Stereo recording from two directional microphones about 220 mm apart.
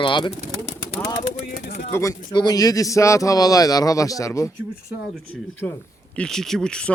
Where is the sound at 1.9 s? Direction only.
15° left (ahead or behind).